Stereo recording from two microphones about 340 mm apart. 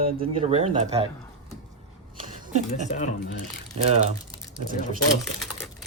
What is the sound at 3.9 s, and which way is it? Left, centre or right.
Crumpling, right.